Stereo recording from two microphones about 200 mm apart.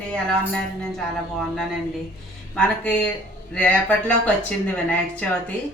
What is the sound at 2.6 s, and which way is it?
A woman's voice, 5° left (ahead or behind).